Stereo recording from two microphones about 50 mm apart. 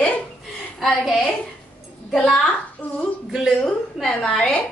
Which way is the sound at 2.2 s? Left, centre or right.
Centre.